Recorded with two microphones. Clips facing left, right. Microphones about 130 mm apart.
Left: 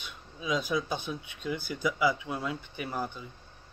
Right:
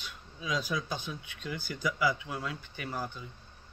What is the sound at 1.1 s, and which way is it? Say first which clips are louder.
Speech: left 5 dB; 15° left (ahead or behind).